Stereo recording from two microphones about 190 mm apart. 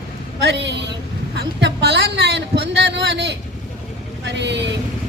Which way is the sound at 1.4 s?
60° right (ahead or behind).